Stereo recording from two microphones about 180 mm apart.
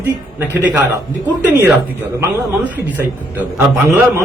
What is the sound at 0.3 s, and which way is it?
Speech, 10° right (ahead or behind).